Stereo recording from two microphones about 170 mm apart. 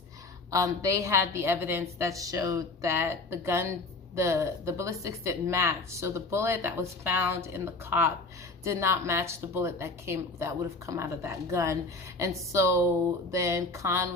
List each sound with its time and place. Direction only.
0.5 s a woman's voice: 20° right (ahead or behind)